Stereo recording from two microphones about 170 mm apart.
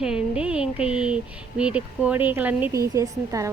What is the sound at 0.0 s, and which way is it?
A woman's voice, 5° right (ahead or behind).